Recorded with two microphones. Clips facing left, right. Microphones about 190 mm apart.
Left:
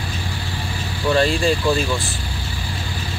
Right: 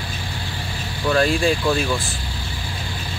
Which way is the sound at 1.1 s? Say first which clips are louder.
Left 1 dB; 5° right (ahead or behind).